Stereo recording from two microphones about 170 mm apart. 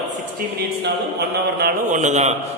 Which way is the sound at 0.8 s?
75° right (ahead or behind).